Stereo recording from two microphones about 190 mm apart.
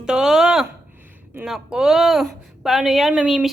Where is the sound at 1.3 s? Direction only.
5° right (ahead or behind).